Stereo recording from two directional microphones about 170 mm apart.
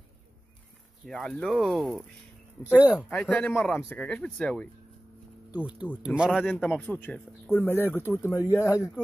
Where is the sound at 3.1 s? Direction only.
5° left (ahead or behind).